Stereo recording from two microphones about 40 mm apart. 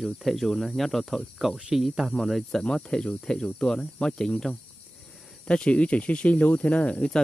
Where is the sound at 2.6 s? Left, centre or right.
Left.